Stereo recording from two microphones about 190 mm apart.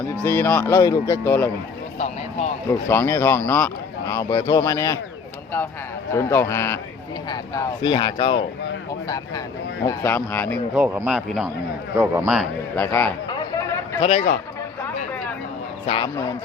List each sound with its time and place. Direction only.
0.3 s speech: 10° left (ahead or behind)
2.6 s speech: 15° left (ahead or behind)
6.1 s speech: 15° left (ahead or behind)
10.8 s a man's voice: 10° right (ahead or behind)
12.7 s a sound: 10° left (ahead or behind)
14.0 s a man's voice: 35° left (ahead or behind)